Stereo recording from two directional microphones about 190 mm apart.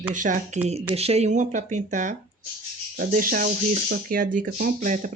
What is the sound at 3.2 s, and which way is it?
Speech, 50° right (ahead or behind).